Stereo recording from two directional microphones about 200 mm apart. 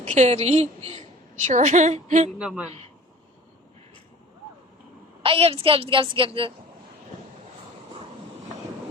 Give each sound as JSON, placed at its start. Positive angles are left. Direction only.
{"t": 0.1, "sound": "a woman's voice", "side_deg": -35}
{"t": 2.4, "sound": "a man's voice", "side_deg": -5}
{"t": 2.6, "sound": "a man's voice", "side_deg": -30}
{"t": 5.2, "sound": "a woman's voice", "side_deg": -30}